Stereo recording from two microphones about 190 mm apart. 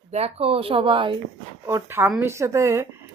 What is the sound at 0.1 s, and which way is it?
Speech, 35° right (ahead or behind).